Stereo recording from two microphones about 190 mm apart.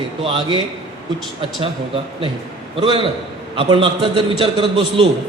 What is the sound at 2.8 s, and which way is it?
A man's voice, 30° right (ahead or behind).